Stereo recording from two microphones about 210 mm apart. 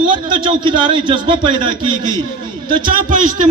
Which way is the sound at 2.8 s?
40° right (ahead or behind).